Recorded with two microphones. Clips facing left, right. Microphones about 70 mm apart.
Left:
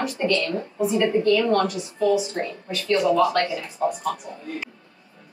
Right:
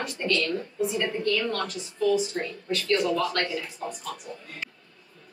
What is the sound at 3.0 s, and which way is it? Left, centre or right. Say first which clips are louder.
Speech: left 7 dB; centre.